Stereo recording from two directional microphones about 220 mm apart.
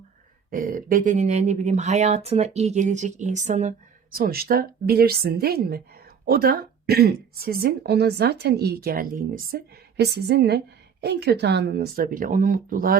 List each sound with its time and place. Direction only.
0.5 s speech: 40° right (ahead or behind)